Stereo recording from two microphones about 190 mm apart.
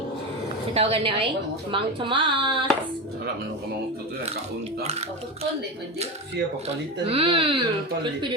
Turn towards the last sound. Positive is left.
turn(degrees=-25)  # may be behind; listen again after turning